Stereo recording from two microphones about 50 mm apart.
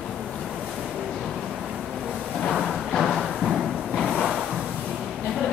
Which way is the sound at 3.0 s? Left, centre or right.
Centre.